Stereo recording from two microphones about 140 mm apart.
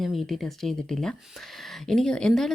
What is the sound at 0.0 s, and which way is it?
Speech, centre (ahead or behind).